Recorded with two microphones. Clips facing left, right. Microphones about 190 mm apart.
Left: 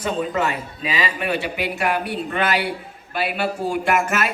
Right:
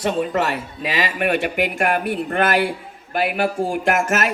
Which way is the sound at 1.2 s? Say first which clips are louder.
Right 4 dB; 50° right (ahead or behind).